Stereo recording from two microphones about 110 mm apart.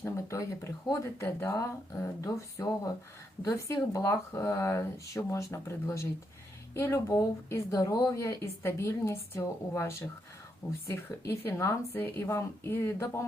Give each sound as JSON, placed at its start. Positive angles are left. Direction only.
{"t": 0.0, "sound": "speech", "side_deg": 25}